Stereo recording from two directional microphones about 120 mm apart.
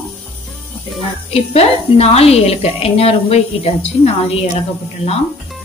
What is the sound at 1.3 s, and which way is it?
Speech, 60° left (ahead or behind).